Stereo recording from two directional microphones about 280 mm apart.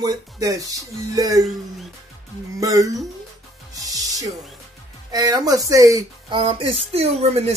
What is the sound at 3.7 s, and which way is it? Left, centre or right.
Music, centre.